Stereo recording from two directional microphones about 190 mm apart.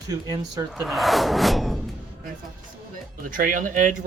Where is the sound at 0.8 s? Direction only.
Centre (ahead or behind).